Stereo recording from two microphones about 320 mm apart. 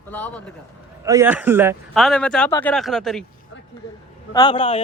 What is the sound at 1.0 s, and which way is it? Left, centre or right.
A man's voice, centre.